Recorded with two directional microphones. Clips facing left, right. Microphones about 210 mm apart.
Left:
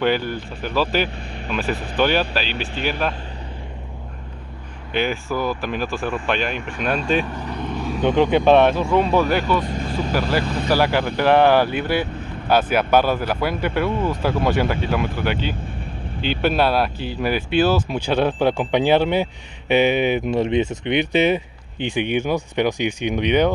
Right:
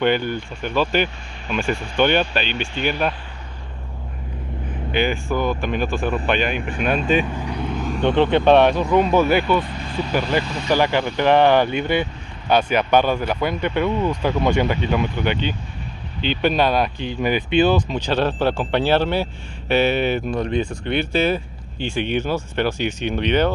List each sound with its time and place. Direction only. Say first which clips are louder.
0.0 s speech: right 1 dB; centre (ahead or behind)
4.9 s speech: right 1 dB; centre (ahead or behind)
7.2 s vehicle: right 1 dB; 10° right (ahead or behind)
7.8 s speech: even; 5° left (ahead or behind)
9.6 s speech: left 1 dB; 45° left (ahead or behind)
10.7 s speech: right 1 dB; 5° left (ahead or behind)